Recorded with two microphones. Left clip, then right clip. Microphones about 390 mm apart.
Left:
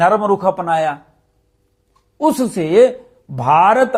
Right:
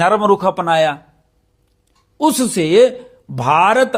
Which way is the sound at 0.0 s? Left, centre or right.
Right.